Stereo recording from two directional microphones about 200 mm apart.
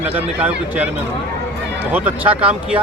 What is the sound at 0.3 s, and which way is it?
Speech, 10° right (ahead or behind).